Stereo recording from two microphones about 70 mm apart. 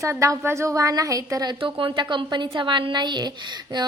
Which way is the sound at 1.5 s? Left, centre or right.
Right.